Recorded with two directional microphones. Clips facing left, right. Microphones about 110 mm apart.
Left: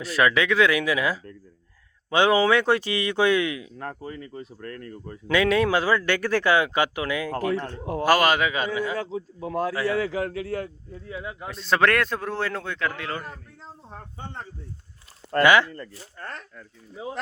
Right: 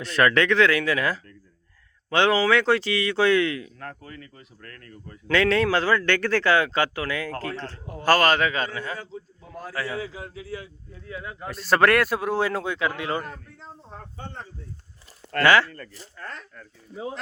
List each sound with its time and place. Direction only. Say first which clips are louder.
0.0 s a man's voice: right 1 dB; 5° left (ahead or behind); by 5.2 s 30° left (ahead or behind)
5.3 s a man's voice: even; 10° left (ahead or behind)
9.0 s a man's voice: left 9 dB; 85° left
9.9 s a man's voice: left 8 dB; 70° left (ahead or behind)
11.0 s speech: left 1 dB; 20° left (ahead or behind)
11.4 s speech: right 2 dB; 5° right (ahead or behind)
13.2 s a man's voice: right 1 dB; 5° left (ahead or behind)
15.3 s speech: left 1 dB; 20° left (ahead or behind)